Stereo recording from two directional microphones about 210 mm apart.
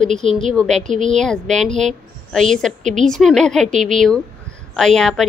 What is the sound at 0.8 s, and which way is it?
Speech, 35° right (ahead or behind).